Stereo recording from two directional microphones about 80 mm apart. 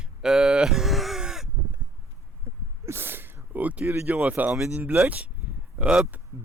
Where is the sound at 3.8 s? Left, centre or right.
Right.